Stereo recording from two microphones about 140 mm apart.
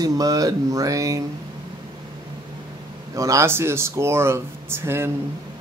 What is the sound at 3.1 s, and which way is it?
Speech, 20° right (ahead or behind).